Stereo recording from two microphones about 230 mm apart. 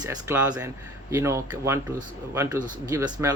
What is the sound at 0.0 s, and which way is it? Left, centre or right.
A man's voice, centre.